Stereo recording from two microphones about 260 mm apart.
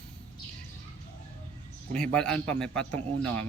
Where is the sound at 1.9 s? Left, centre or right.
Centre.